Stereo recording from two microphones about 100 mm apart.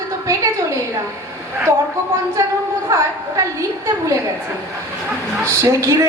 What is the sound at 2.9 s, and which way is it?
Speech, 30° right (ahead or behind).